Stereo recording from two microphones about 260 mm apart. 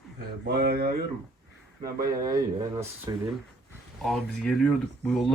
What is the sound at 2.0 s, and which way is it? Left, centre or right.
A man's voice, centre.